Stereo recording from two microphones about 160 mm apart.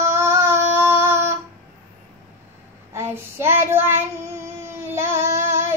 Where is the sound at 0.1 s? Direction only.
15° right (ahead or behind).